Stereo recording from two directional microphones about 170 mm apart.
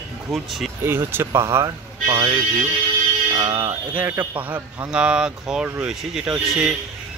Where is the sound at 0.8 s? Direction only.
15° right (ahead or behind).